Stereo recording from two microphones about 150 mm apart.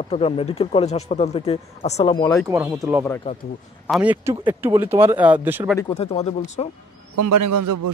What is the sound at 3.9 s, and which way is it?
Speech, 10° right (ahead or behind).